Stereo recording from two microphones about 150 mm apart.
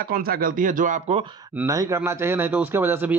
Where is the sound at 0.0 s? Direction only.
75° right (ahead or behind); by 1.2 s 55° right (ahead or behind).